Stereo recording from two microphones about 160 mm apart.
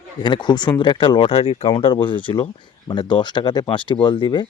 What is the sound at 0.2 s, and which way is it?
Speech, 25° left (ahead or behind).